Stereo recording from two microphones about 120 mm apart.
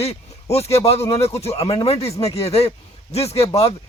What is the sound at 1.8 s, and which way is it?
Speech, 55° left (ahead or behind).